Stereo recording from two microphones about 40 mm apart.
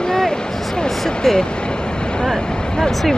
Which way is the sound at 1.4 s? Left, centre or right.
Left.